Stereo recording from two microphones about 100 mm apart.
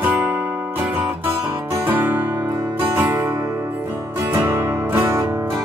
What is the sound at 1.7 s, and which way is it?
Music, 20° right (ahead or behind).